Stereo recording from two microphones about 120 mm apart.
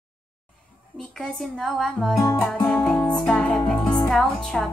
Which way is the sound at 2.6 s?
10° left (ahead or behind).